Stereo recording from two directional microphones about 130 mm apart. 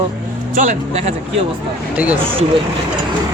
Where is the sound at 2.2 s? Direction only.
45° right (ahead or behind).